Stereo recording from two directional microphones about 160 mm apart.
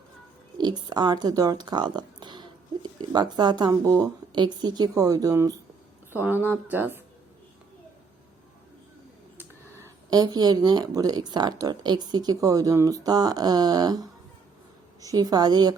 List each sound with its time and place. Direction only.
0.6 s speech: 25° right (ahead or behind)
9.4 s speech: 15° right (ahead or behind)